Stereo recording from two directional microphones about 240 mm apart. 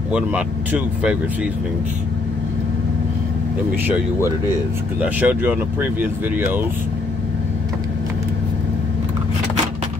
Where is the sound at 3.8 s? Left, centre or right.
Centre.